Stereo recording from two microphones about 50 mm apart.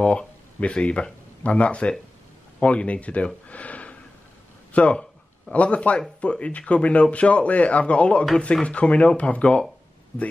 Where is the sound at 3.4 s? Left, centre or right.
Left.